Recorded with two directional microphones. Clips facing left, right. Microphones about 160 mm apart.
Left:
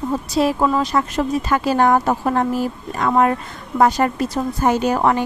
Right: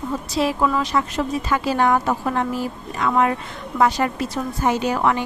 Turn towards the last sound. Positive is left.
turn(degrees=40)  # may be behind; listen again after turning